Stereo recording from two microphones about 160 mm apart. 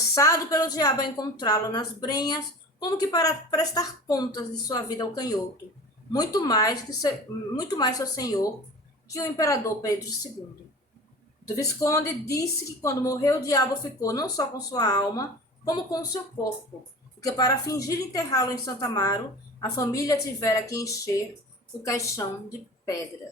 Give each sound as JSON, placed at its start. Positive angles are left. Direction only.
{"t": 0.1, "sound": "a woman's voice", "side_deg": 20}
{"t": 11.5, "sound": "a woman's voice", "side_deg": 20}
{"t": 17.2, "sound": "a woman's voice", "side_deg": 20}